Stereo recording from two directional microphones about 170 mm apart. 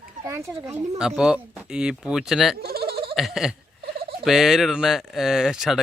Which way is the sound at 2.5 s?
65° right (ahead or behind).